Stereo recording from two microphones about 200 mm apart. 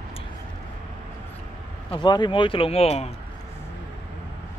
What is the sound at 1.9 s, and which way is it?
Speech, 20° left (ahead or behind).